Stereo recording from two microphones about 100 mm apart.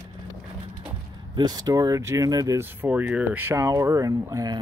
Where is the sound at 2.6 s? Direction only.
20° right (ahead or behind).